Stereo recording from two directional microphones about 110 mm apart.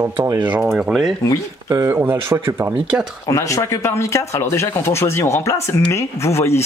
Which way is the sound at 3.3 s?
30° left (ahead or behind).